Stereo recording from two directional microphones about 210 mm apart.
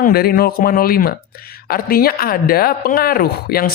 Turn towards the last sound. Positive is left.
turn(degrees=45)  # may be behind; listen again after turning